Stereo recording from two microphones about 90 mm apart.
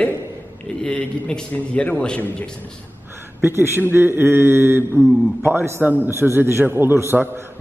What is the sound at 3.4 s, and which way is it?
Mantra, 25° right (ahead or behind).